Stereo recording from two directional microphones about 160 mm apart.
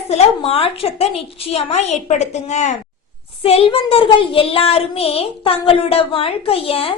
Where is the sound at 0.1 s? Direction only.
40° left (ahead or behind).